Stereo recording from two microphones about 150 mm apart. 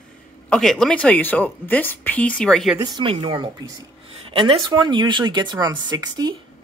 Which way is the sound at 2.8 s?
30° right (ahead or behind).